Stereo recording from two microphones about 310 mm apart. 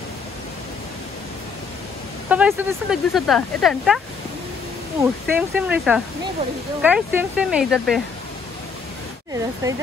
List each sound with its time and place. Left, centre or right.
2.2 s speech: centre
5.0 s speech: centre
9.6 s speech: centre